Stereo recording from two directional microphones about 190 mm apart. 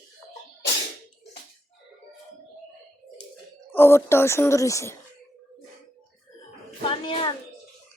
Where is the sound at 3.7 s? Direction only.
10° left (ahead or behind).